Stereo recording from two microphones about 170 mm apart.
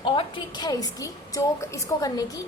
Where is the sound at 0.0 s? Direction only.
30° left (ahead or behind).